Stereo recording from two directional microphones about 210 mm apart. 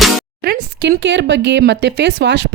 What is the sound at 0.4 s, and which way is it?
Speech, 50° right (ahead or behind).